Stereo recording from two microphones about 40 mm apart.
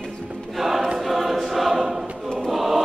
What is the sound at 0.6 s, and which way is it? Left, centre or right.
Choir, centre.